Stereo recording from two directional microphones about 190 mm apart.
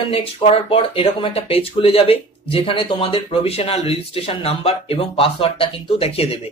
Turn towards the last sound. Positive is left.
turn(degrees=30)  # may be behind; listen again after turning